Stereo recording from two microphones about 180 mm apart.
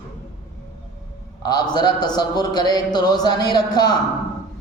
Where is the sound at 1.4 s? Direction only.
20° left (ahead or behind).